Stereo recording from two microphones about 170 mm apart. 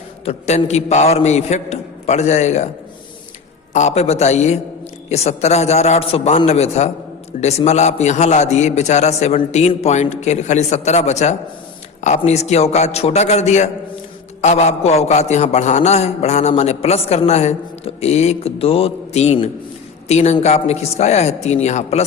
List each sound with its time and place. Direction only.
0.3 s a man's voice: 40° left (ahead or behind)
3.7 s a man's voice: 45° left (ahead or behind)